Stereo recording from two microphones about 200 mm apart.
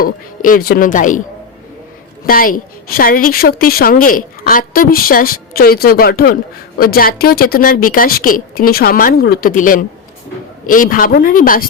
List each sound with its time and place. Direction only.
0.0 s a woman's voice: 45° left (ahead or behind)
2.2 s a woman's voice: 45° left (ahead or behind)